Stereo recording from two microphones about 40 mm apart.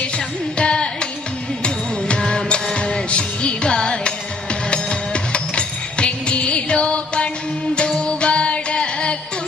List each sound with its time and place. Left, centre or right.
0.5 s carnatic music: left
1.6 s music: left